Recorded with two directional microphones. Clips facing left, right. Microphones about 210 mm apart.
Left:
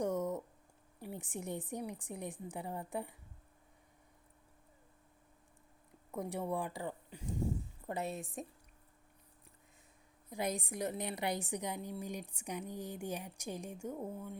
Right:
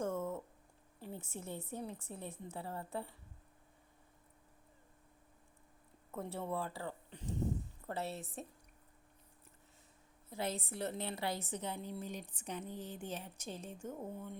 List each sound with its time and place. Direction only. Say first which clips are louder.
0.0 s a sound: left 3 dB; 15° left (ahead or behind)
1.0 s a woman's voice: left 3 dB; 15° left (ahead or behind)
6.1 s a woman's voice: left 3 dB; 15° left (ahead or behind)
10.2 s a woman's voice: left 2 dB; 15° left (ahead or behind)